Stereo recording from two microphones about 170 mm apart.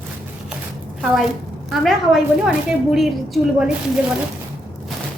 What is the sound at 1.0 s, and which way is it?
A woman's voice, centre (ahead or behind).